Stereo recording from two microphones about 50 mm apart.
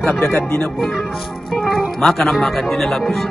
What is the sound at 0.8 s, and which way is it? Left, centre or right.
Speech, centre.